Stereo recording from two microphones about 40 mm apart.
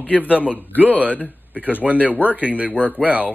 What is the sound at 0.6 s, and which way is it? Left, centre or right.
Speech, left.